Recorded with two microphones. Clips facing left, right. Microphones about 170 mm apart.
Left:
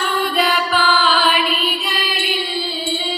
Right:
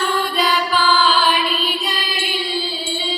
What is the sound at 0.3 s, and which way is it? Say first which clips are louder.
Music: left 2 dB; 55° left (ahead or behind).